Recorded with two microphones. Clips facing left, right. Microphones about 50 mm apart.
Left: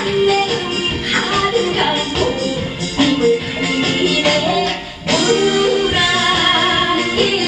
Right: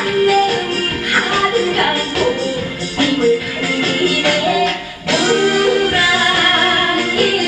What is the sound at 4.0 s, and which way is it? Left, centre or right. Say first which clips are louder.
Music: even; right.